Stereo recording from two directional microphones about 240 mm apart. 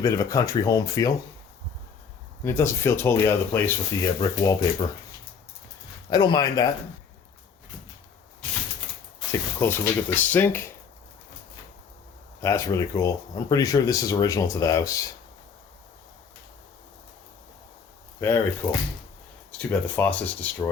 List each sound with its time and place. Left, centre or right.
0.0 s speech: centre
2.4 s speech: centre
6.1 s speech: centre
9.6 s speech: centre
12.4 s speech: centre
18.2 s speech: centre
19.5 s speech: centre